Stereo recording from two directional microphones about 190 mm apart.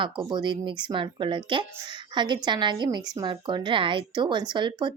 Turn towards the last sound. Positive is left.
turn(degrees=-25)  # may be behind; listen again after turning